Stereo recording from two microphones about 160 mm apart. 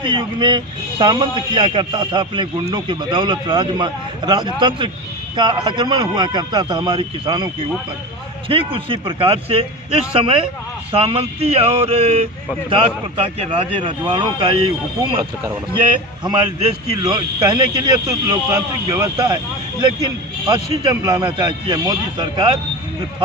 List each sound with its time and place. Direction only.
0.0 s speech: 30° right (ahead or behind)
20.5 s speech: 20° right (ahead or behind)